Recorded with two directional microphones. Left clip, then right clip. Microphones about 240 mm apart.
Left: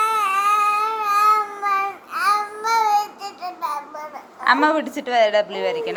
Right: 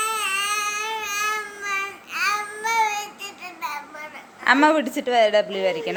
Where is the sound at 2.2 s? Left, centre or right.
Right.